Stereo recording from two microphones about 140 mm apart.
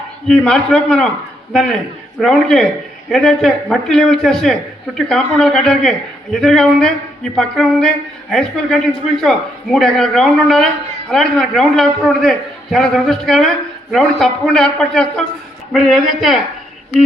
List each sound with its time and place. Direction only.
0.3 s a man's voice: 5° left (ahead or behind)
2.2 s a man's voice: 5° left (ahead or behind)